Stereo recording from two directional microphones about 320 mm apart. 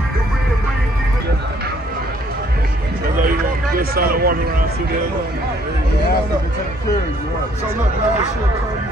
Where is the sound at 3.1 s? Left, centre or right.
Right.